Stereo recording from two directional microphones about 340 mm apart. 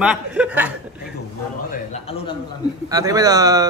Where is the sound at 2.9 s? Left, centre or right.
Centre.